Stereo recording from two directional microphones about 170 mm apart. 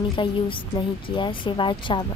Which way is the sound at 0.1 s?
30° left (ahead or behind).